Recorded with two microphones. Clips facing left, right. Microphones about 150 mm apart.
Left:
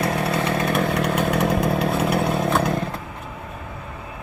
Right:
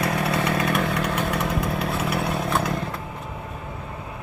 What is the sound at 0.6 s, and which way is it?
Chainsaw, 35° left (ahead or behind).